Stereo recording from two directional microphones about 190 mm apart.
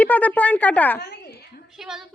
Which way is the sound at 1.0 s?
60° left (ahead or behind).